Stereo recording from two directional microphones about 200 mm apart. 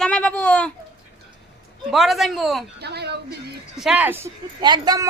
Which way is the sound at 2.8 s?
55° right (ahead or behind).